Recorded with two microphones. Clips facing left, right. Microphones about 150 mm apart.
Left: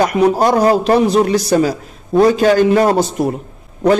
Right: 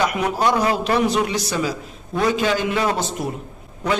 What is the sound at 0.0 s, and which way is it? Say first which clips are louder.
A man's voice: left 7 dB; 40° left (ahead or behind).